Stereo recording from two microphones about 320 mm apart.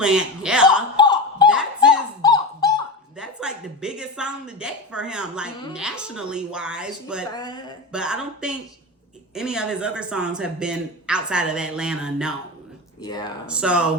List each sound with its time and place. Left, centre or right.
0.0 s speech: centre
0.9 s a sound: centre
1.5 s a sound: centre
2.2 s dog: centre
3.2 s a sound: centre
5.7 s speech: centre
7.3 s speech: centre
7.9 s speech: centre
13.0 s speech: centre
13.5 s speech: centre